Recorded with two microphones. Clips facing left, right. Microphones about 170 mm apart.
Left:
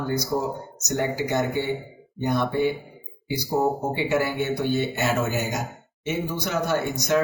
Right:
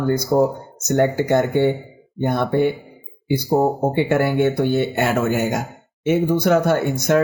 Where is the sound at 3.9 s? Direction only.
55° right (ahead or behind).